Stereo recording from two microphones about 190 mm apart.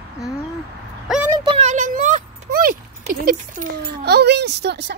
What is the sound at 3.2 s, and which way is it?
Speech, 50° right (ahead or behind).